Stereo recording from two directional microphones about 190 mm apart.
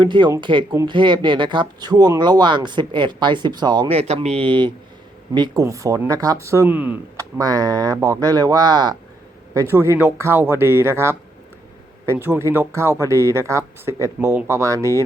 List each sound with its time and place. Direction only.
0.0 s speech: 25° right (ahead or behind)